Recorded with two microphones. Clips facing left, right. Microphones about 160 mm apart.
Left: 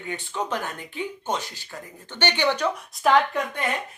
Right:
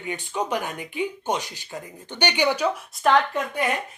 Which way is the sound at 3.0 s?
Centre (ahead or behind).